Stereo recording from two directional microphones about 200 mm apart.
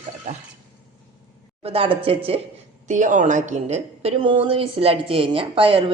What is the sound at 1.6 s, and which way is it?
Speech, 30° right (ahead or behind).